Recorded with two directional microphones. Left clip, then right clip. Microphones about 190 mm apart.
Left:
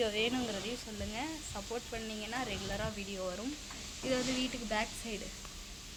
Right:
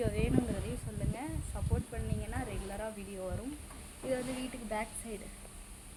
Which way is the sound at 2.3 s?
5° left (ahead or behind).